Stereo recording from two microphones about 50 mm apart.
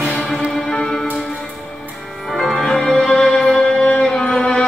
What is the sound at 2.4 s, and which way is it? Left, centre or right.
Music, centre.